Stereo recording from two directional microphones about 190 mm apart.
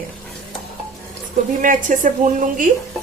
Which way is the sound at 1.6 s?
45° right (ahead or behind).